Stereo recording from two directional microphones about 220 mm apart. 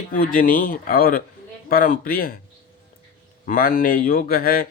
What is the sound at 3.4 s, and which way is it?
Speech, 40° left (ahead or behind).